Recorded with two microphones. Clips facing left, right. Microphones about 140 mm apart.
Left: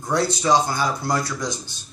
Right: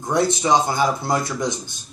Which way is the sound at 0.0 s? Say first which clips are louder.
Right 2 dB; 20° right (ahead or behind).